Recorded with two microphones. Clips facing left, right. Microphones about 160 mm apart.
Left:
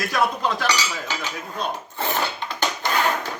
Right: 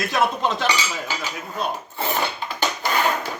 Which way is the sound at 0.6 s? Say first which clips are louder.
Right 1 dB; 5° right (ahead or behind).